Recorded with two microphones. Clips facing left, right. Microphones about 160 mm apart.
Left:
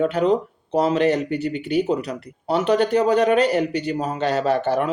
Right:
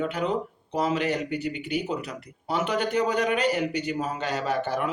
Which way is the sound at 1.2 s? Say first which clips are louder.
Left 6 dB; 15° right (ahead or behind).